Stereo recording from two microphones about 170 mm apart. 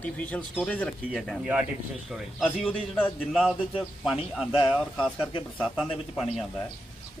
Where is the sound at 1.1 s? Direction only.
5° right (ahead or behind).